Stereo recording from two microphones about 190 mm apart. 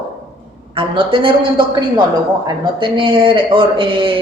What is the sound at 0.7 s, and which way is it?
Speech, 25° right (ahead or behind).